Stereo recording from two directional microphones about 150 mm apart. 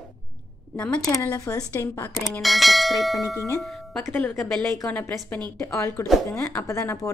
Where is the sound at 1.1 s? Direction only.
20° left (ahead or behind).